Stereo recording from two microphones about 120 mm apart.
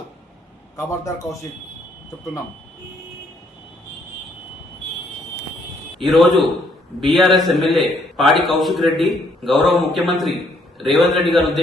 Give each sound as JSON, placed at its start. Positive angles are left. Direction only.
{"t": 0.8, "sound": "a man's voice", "side_deg": 25}
{"t": 6.0, "sound": "a man's voice", "side_deg": 0}